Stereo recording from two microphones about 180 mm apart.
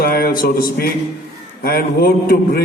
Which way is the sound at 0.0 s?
55° left (ahead or behind).